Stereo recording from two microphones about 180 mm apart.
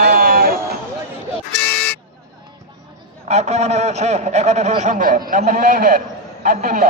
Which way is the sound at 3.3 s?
35° right (ahead or behind).